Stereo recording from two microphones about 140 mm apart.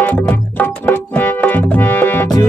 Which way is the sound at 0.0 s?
10° left (ahead or behind).